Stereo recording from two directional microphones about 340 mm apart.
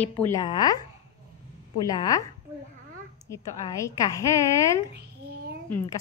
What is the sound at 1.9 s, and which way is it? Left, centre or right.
A woman's voice, centre.